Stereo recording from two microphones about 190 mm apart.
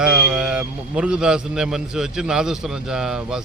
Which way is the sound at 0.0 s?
5° right (ahead or behind).